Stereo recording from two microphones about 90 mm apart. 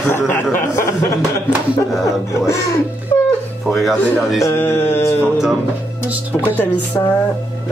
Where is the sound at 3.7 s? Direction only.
Centre (ahead or behind).